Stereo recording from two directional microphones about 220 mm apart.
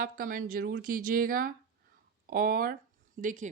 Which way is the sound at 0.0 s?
40° right (ahead or behind).